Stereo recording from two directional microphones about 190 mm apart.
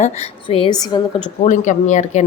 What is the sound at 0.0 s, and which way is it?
Speech, 30° left (ahead or behind).